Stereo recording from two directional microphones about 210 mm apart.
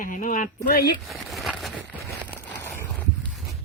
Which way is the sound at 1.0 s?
Centre (ahead or behind).